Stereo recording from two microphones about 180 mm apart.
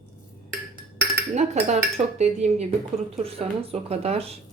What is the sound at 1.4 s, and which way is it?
Speech, 40° right (ahead or behind).